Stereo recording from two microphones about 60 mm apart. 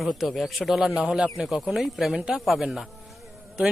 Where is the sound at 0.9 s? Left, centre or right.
Centre.